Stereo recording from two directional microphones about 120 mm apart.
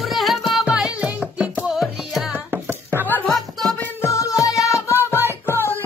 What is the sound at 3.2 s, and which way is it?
Music, centre (ahead or behind).